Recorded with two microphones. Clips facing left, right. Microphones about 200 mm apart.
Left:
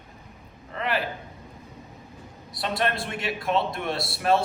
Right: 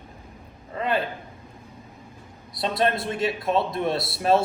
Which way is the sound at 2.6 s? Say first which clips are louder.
Right 3 dB; 25° right (ahead or behind).